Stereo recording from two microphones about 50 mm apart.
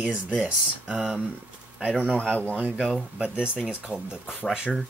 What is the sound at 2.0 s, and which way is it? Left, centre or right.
Speech, left.